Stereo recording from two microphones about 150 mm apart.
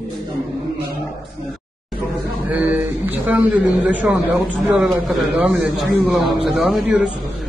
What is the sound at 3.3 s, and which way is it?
A man's voice, 10° right (ahead or behind).